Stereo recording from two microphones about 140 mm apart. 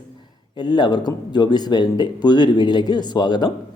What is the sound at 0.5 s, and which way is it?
Speech, 30° left (ahead or behind).